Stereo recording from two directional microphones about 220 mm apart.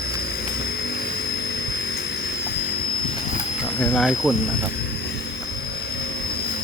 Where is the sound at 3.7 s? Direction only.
Centre (ahead or behind).